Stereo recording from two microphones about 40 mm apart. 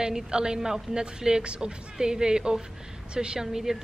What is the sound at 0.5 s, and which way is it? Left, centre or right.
Speech, centre.